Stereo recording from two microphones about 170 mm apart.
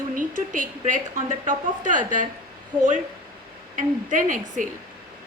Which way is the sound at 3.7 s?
50° right (ahead or behind).